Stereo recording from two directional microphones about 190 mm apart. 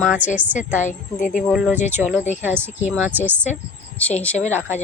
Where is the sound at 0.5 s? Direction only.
40° left (ahead or behind).